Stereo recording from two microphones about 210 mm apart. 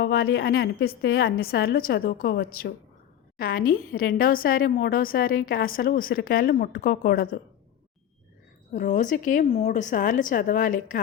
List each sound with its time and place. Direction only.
0.0 s a woman's voice: 50° left (ahead or behind)
8.7 s a woman's voice: 35° left (ahead or behind)